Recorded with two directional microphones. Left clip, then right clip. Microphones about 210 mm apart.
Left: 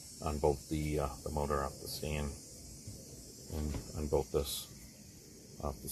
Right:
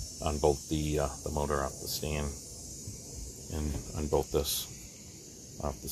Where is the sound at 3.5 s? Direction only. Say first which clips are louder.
Right 4 dB; centre (ahead or behind).